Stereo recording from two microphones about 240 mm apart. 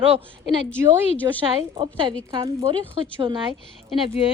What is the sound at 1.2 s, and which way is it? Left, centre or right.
A woman's voice, centre.